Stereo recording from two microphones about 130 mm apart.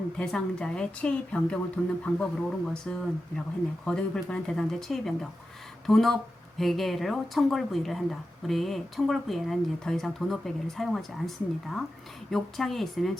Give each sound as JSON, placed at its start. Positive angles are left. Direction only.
{"t": 0.2, "sound": "a woman's voice", "side_deg": 5}